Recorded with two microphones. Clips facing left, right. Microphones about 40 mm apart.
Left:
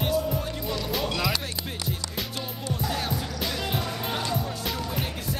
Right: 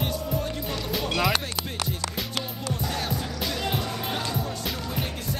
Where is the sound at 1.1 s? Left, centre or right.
Right.